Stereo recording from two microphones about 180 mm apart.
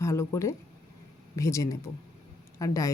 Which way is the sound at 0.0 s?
15° left (ahead or behind).